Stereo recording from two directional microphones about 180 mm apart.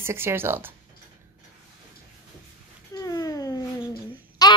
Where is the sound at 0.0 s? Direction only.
15° right (ahead or behind).